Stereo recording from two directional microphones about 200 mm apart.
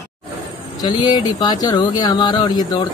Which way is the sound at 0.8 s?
20° left (ahead or behind).